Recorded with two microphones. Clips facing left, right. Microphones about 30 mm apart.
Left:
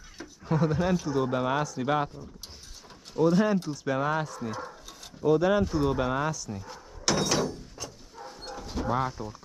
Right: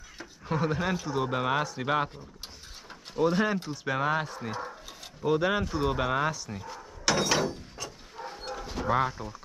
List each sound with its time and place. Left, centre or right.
0.5 s speech: centre
6.7 s dog: centre